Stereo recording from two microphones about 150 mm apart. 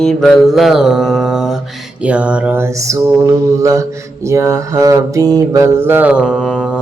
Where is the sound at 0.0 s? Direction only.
5° left (ahead or behind).